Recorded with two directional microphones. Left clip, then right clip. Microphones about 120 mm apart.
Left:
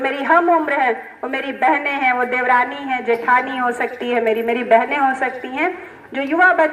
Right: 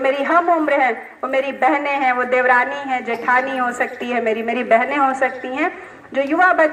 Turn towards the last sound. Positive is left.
turn(degrees=-40)  # may be behind; listen again after turning